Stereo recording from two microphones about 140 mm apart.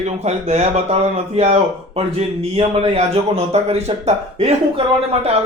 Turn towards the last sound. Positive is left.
turn(degrees=-45)  # may be behind; listen again after turning